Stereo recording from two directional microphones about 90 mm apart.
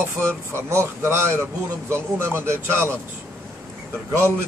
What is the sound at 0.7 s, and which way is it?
Speech, 30° right (ahead or behind).